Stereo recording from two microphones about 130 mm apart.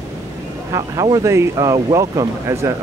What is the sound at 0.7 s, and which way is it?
Speech, 25° right (ahead or behind).